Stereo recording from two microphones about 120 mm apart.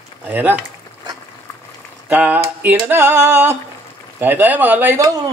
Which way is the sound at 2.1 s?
15° right (ahead or behind).